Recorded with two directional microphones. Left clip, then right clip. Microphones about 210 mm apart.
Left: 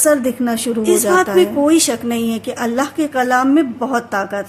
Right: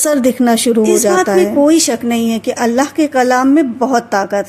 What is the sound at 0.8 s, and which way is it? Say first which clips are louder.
A woman's voice: left 2 dB; 20° right (ahead or behind).